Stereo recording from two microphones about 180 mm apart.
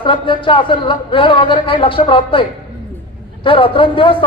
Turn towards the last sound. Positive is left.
turn(degrees=30)  # may be behind; listen again after turning